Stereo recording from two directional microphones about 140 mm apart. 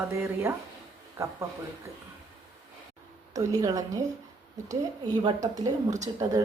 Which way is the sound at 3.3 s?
25° right (ahead or behind).